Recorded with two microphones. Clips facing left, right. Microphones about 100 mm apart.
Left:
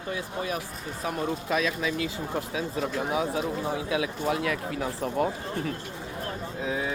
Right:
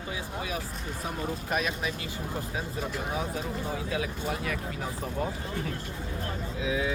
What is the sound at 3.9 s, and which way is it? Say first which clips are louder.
Speech: left 6 dB; 80° left.